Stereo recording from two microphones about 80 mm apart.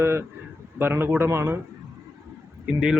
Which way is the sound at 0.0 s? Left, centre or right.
Right.